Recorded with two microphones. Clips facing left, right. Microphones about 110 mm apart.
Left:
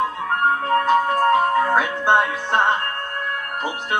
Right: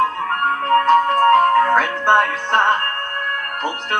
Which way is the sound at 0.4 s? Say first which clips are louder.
Right 1 dB; 55° right (ahead or behind).